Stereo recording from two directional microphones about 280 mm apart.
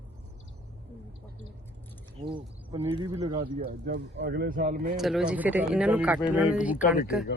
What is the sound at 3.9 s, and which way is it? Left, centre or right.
Speech, right.